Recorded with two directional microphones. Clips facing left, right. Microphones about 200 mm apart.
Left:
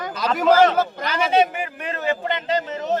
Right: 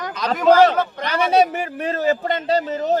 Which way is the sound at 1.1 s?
40° right (ahead or behind).